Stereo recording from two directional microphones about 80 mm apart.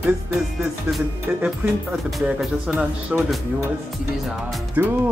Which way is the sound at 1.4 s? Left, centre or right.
Centre.